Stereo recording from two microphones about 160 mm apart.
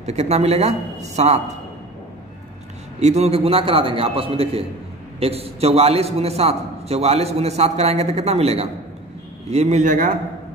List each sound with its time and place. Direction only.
0.0 s speech: 45° right (ahead or behind)
3.0 s a man's voice: 45° right (ahead or behind)